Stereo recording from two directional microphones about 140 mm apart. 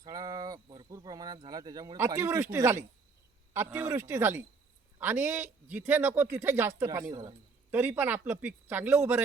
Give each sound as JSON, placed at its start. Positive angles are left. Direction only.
{"t": 0.0, "sound": "a sound", "side_deg": -25}
{"t": 2.0, "sound": "speech", "side_deg": -20}
{"t": 7.7, "sound": "speech", "side_deg": -15}